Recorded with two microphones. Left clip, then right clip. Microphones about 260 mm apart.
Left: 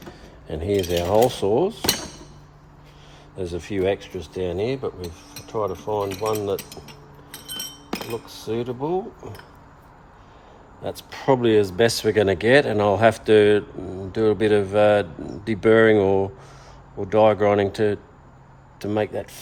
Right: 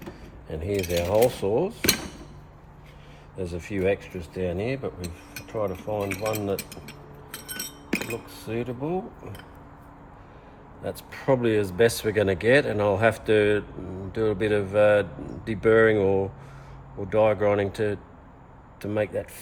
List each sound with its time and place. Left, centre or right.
0.4 s speech: left
3.3 s speech: left
8.3 s speech: left
10.8 s speech: left